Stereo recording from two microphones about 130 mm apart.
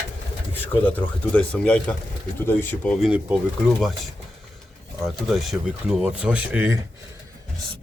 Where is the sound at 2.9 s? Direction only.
5° right (ahead or behind).